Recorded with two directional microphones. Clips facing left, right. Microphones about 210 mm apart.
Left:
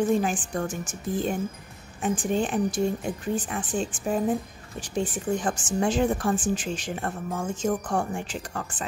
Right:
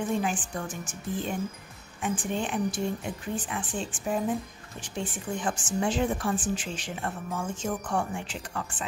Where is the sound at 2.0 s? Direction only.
40° left (ahead or behind).